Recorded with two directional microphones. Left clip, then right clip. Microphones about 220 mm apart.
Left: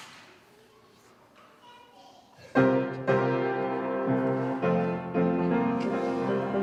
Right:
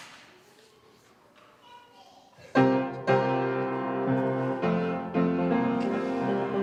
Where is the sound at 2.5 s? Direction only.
35° right (ahead or behind).